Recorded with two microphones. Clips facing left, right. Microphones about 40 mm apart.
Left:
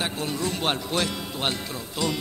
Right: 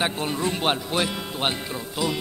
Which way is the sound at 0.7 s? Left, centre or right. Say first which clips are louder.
Right 1 dB; centre.